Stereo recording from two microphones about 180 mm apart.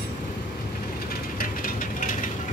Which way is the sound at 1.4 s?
50° left (ahead or behind).